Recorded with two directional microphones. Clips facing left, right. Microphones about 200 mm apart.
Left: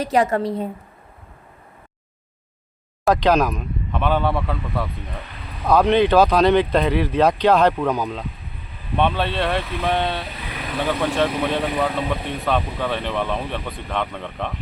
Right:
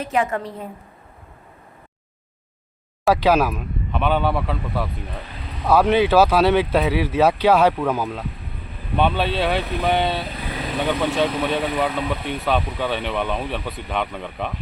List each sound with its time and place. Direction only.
0.0 s a woman's voice: 40° left (ahead or behind)
3.0 s speech: 5° right (ahead or behind)